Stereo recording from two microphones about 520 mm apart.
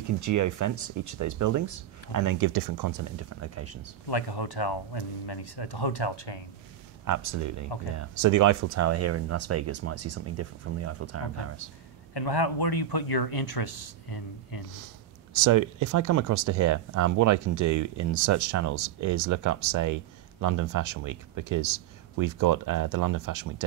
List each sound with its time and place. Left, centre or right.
0.2 s speech: right
4.1 s speech: left
7.2 s speech: right
12.1 s speech: left
15.3 s speech: right